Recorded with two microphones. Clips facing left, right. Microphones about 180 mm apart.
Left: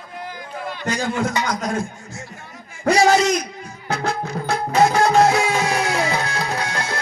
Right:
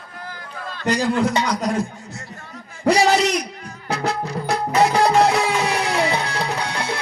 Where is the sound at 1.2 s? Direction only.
30° right (ahead or behind).